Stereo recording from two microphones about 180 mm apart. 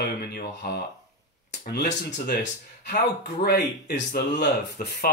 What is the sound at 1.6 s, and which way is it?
Speech, 60° left (ahead or behind).